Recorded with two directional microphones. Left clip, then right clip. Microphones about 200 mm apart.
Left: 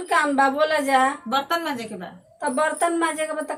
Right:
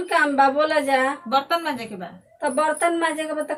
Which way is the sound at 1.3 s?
5° right (ahead or behind).